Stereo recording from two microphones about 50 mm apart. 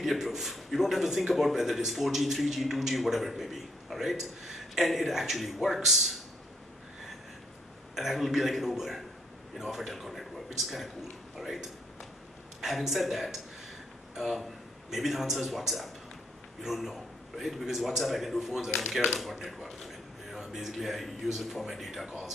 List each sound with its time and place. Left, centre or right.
0.0 s a man's voice: centre
7.9 s a man's voice: centre
11.3 s a sound: centre
12.6 s a man's voice: centre
19.4 s a sound: centre
20.7 s a man's voice: centre